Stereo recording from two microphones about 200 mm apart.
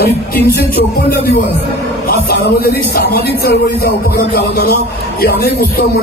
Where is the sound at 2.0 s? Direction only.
50° left (ahead or behind).